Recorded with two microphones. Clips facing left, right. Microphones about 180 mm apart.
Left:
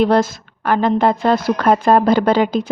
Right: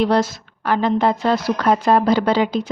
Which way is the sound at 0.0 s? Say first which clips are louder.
Left 3 dB; 50° left (ahead or behind).